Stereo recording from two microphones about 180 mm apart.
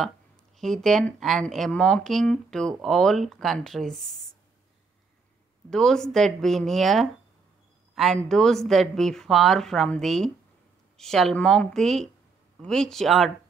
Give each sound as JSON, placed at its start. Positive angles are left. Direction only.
{"t": 0.6, "sound": "a woman's voice", "side_deg": 0}
{"t": 5.7, "sound": "a woman's voice", "side_deg": 0}